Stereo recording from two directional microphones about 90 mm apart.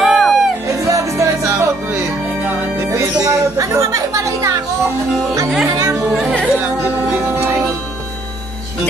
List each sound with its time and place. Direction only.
0.0 s music: centre (ahead or behind)
0.7 s music: 35° right (ahead or behind)
5.8 s music: 35° right (ahead or behind)
6.0 s music: centre (ahead or behind)
6.4 s music: 20° right (ahead or behind)